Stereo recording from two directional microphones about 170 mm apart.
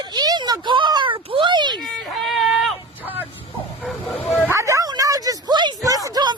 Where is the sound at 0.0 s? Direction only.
25° right (ahead or behind).